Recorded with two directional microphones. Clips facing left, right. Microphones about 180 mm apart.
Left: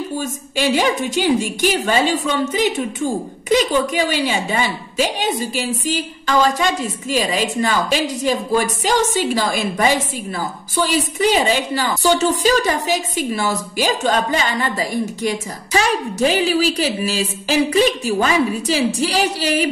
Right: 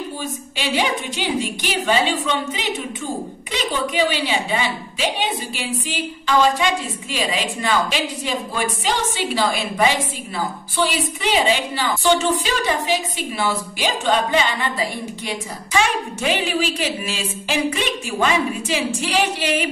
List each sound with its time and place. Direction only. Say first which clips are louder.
0.2 s a woman's voice: left 6 dB; 45° left (ahead or behind)